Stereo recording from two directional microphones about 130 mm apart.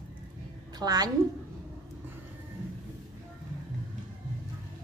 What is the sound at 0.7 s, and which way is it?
Speech, 30° right (ahead or behind).